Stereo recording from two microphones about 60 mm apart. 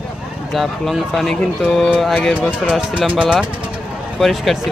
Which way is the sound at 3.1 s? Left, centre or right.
Centre.